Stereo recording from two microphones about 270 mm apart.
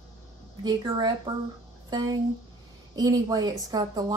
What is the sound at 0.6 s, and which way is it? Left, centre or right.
A woman's voice, centre.